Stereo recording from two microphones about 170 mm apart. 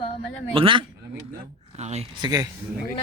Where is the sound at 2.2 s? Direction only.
20° right (ahead or behind).